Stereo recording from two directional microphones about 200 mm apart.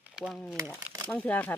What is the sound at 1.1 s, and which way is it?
Speech, 5° left (ahead or behind).